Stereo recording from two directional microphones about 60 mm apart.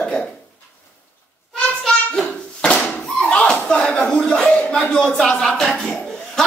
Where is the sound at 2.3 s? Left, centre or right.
Centre.